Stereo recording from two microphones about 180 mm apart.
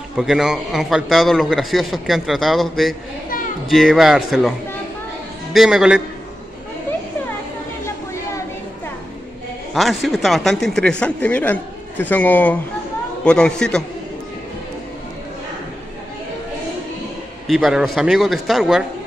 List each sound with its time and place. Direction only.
0.1 s a man's voice: centre (ahead or behind)
7.8 s a sound: 15° left (ahead or behind)
9.8 s a man's voice: centre (ahead or behind)
17.5 s a man's voice: centre (ahead or behind)